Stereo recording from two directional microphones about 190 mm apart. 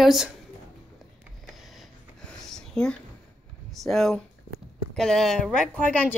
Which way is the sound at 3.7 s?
Centre (ahead or behind).